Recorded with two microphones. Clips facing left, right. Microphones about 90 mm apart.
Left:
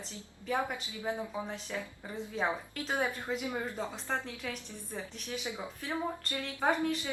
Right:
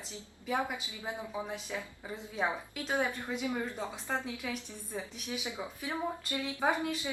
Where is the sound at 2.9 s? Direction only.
15° left (ahead or behind).